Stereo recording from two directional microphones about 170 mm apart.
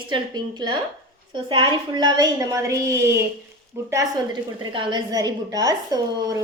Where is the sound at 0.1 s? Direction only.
25° right (ahead or behind).